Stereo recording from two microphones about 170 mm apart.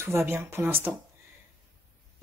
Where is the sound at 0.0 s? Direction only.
15° right (ahead or behind).